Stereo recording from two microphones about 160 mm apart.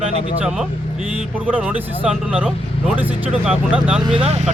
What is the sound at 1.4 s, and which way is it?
Speech, 10° right (ahead or behind).